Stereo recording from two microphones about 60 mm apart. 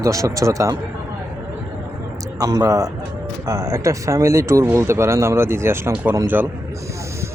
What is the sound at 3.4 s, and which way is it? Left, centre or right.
Speech, right.